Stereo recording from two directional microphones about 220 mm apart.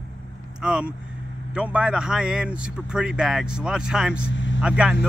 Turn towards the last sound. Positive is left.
turn(degrees=-5)  # may be behind; listen again after turning